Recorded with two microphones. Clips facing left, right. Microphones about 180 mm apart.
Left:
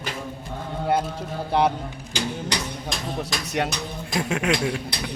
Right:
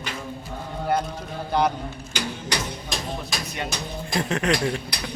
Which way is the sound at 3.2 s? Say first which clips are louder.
Left 5 dB; 75° left (ahead or behind).